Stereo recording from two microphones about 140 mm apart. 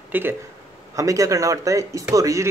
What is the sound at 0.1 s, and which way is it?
Speech, 15° right (ahead or behind).